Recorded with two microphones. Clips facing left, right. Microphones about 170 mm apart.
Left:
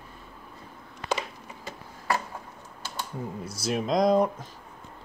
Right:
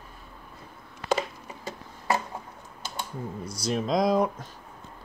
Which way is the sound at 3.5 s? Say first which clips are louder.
Even; 5° left (ahead or behind).